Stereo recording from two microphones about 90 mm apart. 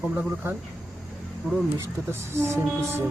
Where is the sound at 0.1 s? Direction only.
25° right (ahead or behind).